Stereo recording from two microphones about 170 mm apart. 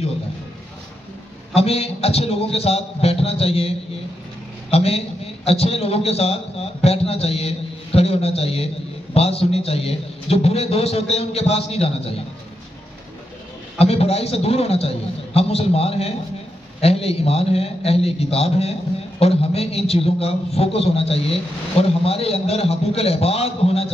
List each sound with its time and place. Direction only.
1.5 s a man's voice: 35° left (ahead or behind)
13.7 s a man's voice: 35° left (ahead or behind)